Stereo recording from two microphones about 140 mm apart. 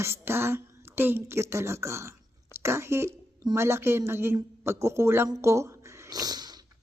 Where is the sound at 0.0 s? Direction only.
15° right (ahead or behind).